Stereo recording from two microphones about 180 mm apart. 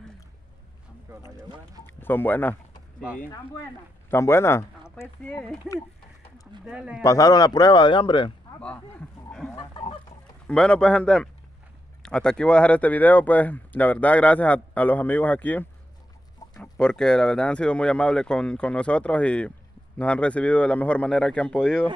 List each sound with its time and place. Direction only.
1.9 s speech: 10° left (ahead or behind)
4.1 s speech: 15° left (ahead or behind)
6.6 s speech: 5° right (ahead or behind)
7.0 s speech: 20° left (ahead or behind)
9.6 s chicken: 30° left (ahead or behind)
10.4 s speech: 5° left (ahead or behind)